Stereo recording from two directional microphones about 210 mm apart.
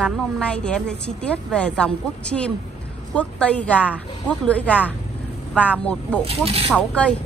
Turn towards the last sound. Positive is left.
turn(degrees=5)  # may be behind; listen again after turning